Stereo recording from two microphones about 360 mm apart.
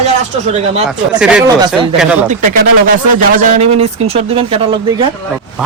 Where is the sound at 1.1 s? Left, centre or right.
Centre.